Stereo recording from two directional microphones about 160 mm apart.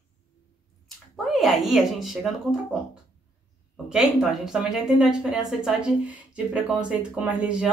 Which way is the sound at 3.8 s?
5° right (ahead or behind).